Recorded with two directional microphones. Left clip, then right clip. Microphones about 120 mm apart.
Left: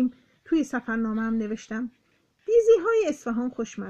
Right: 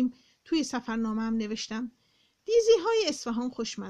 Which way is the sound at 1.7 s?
25° right (ahead or behind).